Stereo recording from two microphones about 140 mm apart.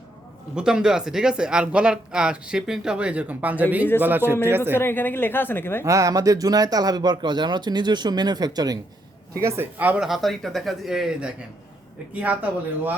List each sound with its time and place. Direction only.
0.5 s a man's voice: 5° right (ahead or behind)
4.7 s speech: 15° left (ahead or behind)
5.8 s speech: 25° right (ahead or behind)
9.4 s a man's voice: 15° right (ahead or behind)